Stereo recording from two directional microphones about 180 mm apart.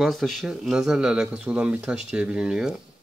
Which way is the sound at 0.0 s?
Centre (ahead or behind).